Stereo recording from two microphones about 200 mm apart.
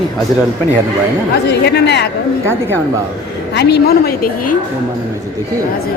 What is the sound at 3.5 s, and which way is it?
A woman's voice, 55° left (ahead or behind).